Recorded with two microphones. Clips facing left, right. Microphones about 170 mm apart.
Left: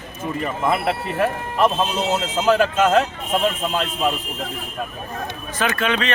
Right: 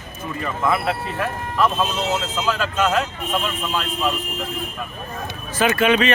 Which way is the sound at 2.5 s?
55° left (ahead or behind).